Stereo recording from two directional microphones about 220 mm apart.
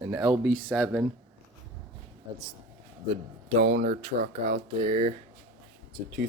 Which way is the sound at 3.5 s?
40° right (ahead or behind).